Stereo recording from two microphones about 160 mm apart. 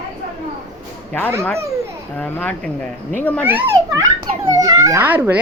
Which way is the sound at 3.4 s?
10° right (ahead or behind).